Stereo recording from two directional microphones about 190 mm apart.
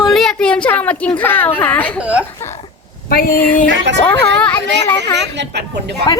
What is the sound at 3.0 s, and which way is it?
Speech, 50° left (ahead or behind).